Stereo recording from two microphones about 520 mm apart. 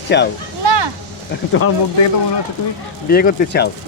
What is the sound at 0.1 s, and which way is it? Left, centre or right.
Speech, centre.